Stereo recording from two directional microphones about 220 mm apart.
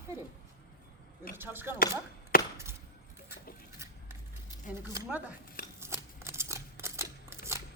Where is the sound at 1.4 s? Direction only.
10° right (ahead or behind).